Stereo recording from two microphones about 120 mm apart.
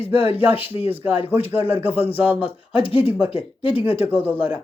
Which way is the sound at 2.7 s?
50° left (ahead or behind).